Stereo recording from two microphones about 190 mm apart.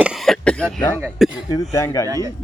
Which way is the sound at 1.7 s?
15° left (ahead or behind).